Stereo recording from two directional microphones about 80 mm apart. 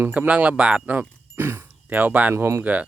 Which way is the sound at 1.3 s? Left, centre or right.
Right.